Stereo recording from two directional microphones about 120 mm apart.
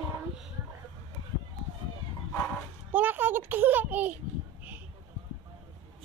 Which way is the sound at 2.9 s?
15° right (ahead or behind).